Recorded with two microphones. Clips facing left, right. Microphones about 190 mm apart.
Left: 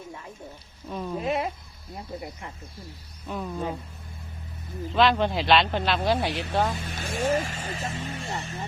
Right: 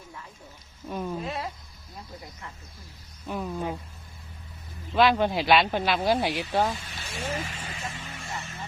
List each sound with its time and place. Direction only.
0.9 s speech: 5° right (ahead or behind)
1.2 s speech: 20° left (ahead or behind)
3.2 s speech: centre (ahead or behind)
4.9 s speech: 5° right (ahead or behind)
6.7 s speech: 55° left (ahead or behind); by 8.5 s 35° left (ahead or behind)